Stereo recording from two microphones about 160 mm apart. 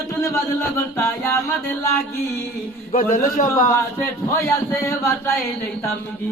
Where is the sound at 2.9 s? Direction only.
60° left (ahead or behind).